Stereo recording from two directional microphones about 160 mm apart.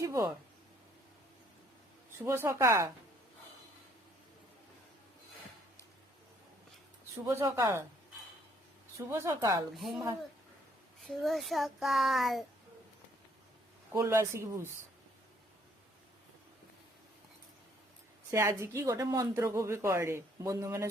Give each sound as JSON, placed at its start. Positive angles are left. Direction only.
{"t": 0.0, "sound": "speech", "side_deg": -20}
{"t": 2.1, "sound": "speech", "side_deg": -15}
{"t": 7.3, "sound": "speech", "side_deg": -20}
{"t": 9.0, "sound": "speech", "side_deg": -15}
{"t": 9.7, "sound": "a child's voice", "side_deg": 0}
{"t": 11.0, "sound": "a child's voice", "side_deg": 0}
{"t": 13.9, "sound": "speech", "side_deg": -15}
{"t": 18.3, "sound": "speech", "side_deg": -15}